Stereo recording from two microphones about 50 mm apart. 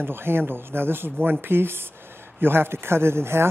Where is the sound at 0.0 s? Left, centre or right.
Right.